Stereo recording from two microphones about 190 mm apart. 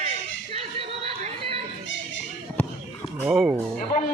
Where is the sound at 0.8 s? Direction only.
30° right (ahead or behind).